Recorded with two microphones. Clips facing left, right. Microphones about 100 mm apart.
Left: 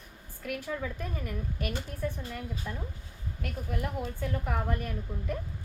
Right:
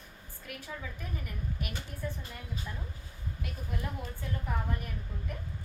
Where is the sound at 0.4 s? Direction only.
65° left (ahead or behind).